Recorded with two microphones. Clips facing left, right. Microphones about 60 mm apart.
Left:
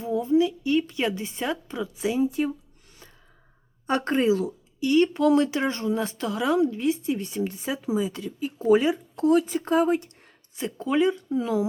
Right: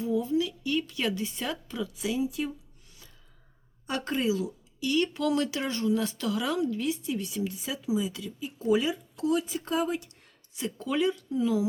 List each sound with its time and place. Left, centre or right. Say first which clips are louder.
0.0 s speech: left 5 dB; left
3.8 s speech: left 7 dB; left
4.8 s speech: left 7 dB; left